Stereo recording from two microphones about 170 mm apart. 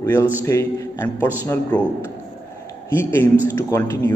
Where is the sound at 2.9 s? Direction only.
15° left (ahead or behind).